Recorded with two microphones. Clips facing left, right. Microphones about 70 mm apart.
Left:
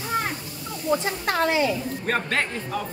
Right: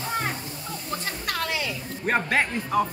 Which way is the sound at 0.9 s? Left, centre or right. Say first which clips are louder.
Left 7 dB; left.